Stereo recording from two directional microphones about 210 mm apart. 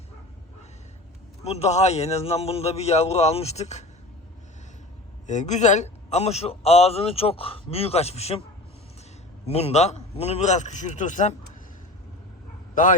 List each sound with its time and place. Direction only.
1.5 s a man's voice: 30° left (ahead or behind)
5.2 s a man's voice: 35° left (ahead or behind)
9.5 s a man's voice: 30° left (ahead or behind)